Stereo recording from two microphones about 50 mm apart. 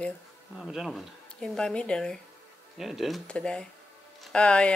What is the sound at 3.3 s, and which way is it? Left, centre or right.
Speech, centre.